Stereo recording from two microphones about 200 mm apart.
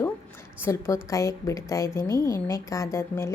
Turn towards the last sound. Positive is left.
turn(degrees=15)  # may be behind; listen again after turning